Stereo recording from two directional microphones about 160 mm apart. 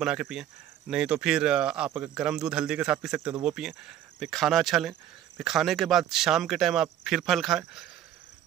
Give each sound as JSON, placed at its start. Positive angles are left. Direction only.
{"t": 0.0, "sound": "speech", "side_deg": -5}